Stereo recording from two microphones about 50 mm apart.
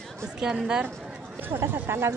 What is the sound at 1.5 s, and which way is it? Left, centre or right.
Speech, right.